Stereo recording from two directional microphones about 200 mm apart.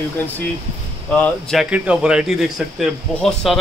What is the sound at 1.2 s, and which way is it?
A man's voice, centre (ahead or behind).